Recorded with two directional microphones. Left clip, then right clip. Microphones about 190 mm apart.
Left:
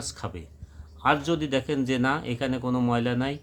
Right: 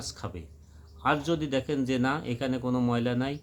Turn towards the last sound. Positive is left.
turn(degrees=5)  # may be behind; listen again after turning